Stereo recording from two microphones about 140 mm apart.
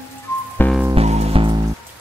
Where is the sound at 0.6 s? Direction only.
15° left (ahead or behind).